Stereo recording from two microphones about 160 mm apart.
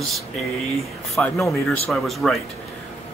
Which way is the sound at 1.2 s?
Centre (ahead or behind).